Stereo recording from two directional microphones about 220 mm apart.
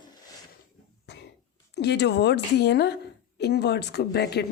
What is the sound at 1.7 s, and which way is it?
Speech, 50° left (ahead or behind).